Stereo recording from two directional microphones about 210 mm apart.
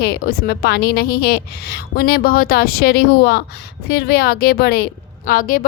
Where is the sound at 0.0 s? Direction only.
50° left (ahead or behind).